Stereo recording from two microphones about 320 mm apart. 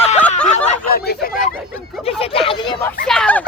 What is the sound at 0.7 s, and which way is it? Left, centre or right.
Speech, left.